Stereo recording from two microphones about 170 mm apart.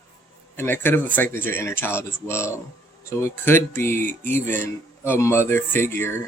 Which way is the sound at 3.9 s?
50° right (ahead or behind).